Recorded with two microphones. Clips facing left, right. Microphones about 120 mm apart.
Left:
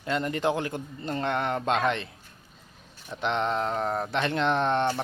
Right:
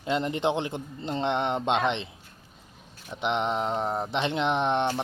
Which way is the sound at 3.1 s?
20° right (ahead or behind).